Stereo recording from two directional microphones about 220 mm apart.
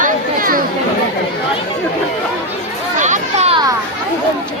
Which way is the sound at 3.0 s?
30° right (ahead or behind).